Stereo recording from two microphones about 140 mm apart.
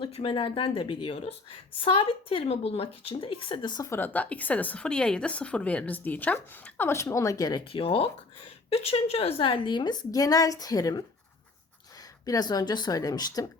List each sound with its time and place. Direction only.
0.0 s a woman's voice: 40° left (ahead or behind)
3.8 s a woman's voice: 15° left (ahead or behind)
7.6 s a woman's voice: 40° left (ahead or behind); by 11.0 s 25° left (ahead or behind)
12.2 s a woman's voice: 25° left (ahead or behind)